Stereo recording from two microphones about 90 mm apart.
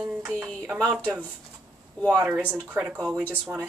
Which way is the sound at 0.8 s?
10° left (ahead or behind).